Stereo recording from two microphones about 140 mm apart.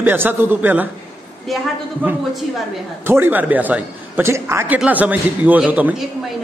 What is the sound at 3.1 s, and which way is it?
A man's voice, 15° right (ahead or behind).